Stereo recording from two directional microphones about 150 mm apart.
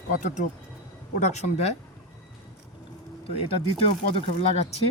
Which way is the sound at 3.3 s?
40° left (ahead or behind).